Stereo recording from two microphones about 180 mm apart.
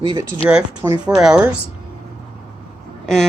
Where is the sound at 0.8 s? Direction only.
10° right (ahead or behind).